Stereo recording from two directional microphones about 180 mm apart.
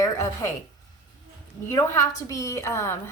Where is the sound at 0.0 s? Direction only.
15° left (ahead or behind).